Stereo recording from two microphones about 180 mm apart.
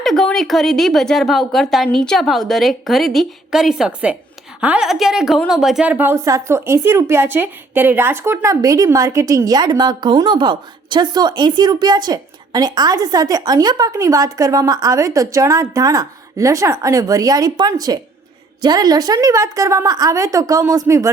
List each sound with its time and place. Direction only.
0.0 s a woman's voice: centre (ahead or behind); by 21.1 s 15° right (ahead or behind)